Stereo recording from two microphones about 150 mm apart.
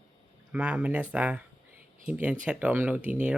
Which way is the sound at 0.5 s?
10° right (ahead or behind).